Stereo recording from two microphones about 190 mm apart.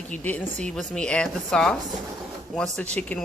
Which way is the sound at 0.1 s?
5° left (ahead or behind).